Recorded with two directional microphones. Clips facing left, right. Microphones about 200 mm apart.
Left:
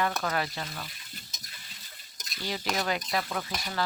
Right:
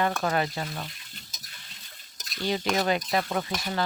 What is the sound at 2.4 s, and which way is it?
Speech, 25° right (ahead or behind).